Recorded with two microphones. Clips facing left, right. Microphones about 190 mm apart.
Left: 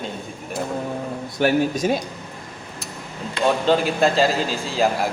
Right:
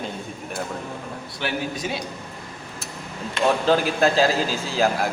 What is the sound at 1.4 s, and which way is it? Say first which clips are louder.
Speech: left 9 dB; 45° left (ahead or behind).